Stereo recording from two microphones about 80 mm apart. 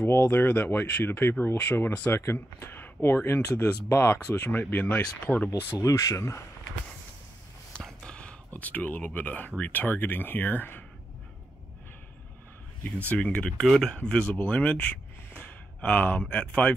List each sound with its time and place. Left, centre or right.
0.1 s speech: left
4.5 s speech: left
5.8 s speech: left
7.8 s a sound: centre
9.6 s speech: left
12.8 s speech: centre